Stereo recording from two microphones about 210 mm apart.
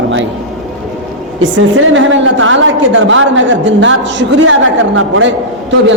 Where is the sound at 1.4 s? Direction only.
65° right (ahead or behind).